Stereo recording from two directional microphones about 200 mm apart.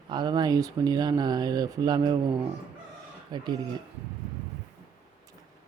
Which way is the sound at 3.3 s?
20° right (ahead or behind).